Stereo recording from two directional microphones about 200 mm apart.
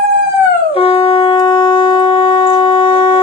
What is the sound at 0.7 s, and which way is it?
Shofar, 30° left (ahead or behind).